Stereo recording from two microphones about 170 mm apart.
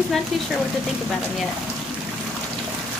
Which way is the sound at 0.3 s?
Centre (ahead or behind).